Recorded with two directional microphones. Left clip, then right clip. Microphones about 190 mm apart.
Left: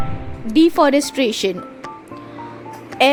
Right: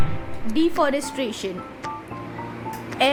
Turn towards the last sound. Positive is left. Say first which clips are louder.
# left 6 dB
turn(degrees=35)  # may be behind; listen again after turning